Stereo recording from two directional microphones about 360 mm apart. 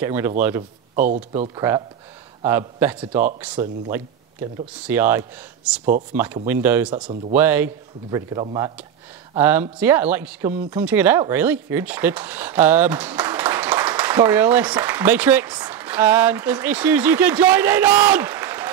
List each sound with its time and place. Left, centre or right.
0.0 s a man's voice: centre
0.9 s a man's voice: right; by 18.7 s centre